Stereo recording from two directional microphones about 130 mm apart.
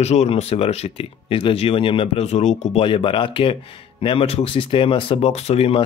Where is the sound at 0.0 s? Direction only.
55° left (ahead or behind).